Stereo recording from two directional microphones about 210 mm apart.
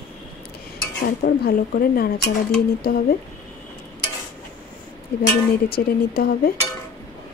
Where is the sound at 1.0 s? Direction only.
45° left (ahead or behind).